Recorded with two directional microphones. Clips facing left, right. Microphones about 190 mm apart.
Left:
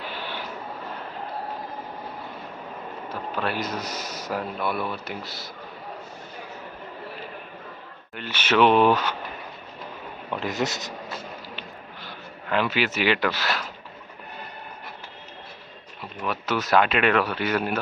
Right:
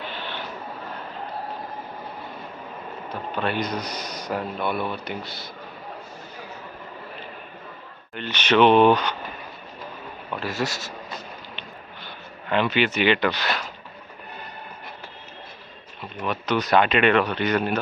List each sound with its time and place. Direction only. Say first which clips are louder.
0.1 s a sound: even; 10° left (ahead or behind)
3.1 s speech: right 2 dB; 5° left (ahead or behind)
8.1 s speech: right 2 dB; 5° left (ahead or behind)
10.4 s speech: even; 20° left (ahead or behind)
12.0 s speech: right 1 dB; 5° left (ahead or behind)
16.2 s speech: right 2 dB; 5° left (ahead or behind)